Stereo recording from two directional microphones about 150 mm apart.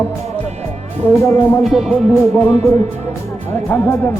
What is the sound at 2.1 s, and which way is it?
Speech, 15° left (ahead or behind).